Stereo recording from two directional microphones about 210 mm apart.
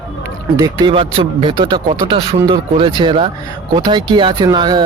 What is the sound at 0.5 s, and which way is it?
Speech, 20° right (ahead or behind).